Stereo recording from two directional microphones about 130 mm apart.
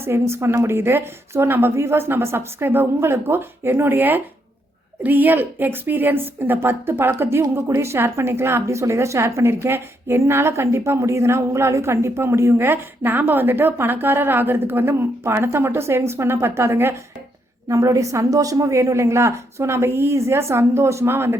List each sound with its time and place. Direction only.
0.0 s a woman's voice: 20° right (ahead or behind)